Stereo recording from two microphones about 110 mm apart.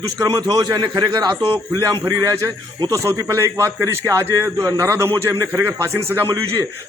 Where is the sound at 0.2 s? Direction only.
35° right (ahead or behind).